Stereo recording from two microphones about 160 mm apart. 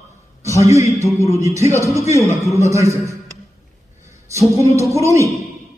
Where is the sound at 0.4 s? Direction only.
20° right (ahead or behind).